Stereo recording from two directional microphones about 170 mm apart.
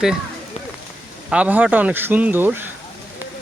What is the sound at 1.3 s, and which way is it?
Speech, 10° right (ahead or behind).